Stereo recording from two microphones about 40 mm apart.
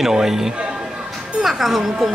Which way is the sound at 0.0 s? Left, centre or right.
Centre.